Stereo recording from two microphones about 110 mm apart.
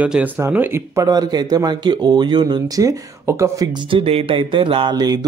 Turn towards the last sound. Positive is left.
turn(degrees=-40)  # may be behind; listen again after turning